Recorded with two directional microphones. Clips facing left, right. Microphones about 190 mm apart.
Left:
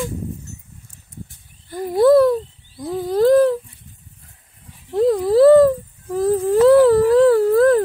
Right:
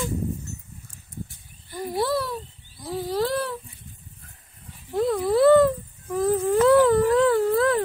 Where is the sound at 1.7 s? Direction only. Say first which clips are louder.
Left 13 dB; 50° left (ahead or behind).